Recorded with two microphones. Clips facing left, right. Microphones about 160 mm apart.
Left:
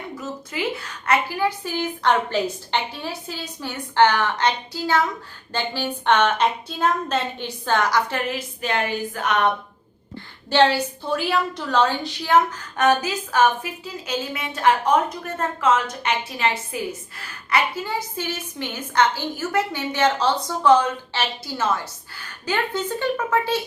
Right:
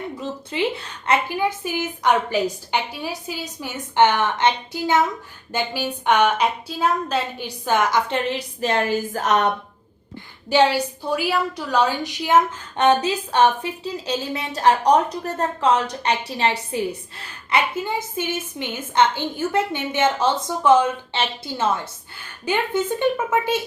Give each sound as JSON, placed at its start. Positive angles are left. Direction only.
{"t": 0.2, "sound": "a woman's voice", "side_deg": -30}
{"t": 10.5, "sound": "a woman's voice", "side_deg": -10}